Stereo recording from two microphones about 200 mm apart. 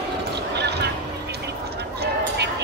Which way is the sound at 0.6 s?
55° right (ahead or behind).